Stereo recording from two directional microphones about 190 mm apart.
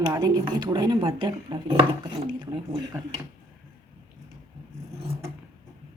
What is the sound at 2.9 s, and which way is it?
Speech, 15° right (ahead or behind).